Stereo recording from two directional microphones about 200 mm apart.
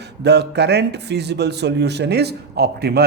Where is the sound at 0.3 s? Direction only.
55° right (ahead or behind).